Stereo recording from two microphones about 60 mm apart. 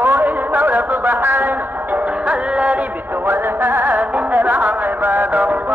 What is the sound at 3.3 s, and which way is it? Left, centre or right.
Music, right.